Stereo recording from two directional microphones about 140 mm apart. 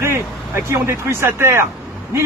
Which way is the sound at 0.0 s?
20° right (ahead or behind).